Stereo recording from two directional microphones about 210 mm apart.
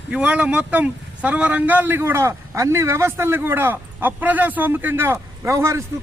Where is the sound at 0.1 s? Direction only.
5° right (ahead or behind).